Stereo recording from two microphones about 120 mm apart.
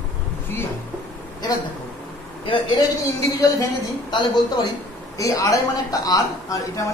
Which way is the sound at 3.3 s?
30° left (ahead or behind).